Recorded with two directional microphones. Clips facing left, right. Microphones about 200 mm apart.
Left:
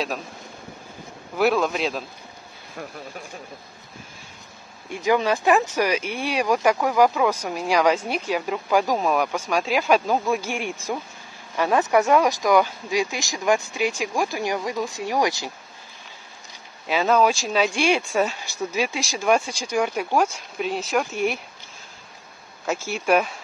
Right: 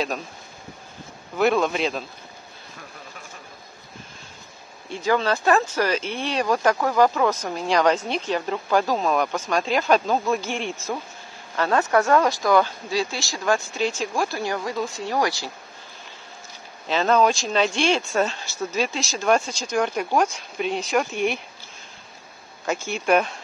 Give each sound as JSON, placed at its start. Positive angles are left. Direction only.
{"t": 1.4, "sound": "speech", "side_deg": 0}
{"t": 5.0, "sound": "speech", "side_deg": 15}
{"t": 16.8, "sound": "speech", "side_deg": 10}
{"t": 22.7, "sound": "speech", "side_deg": 5}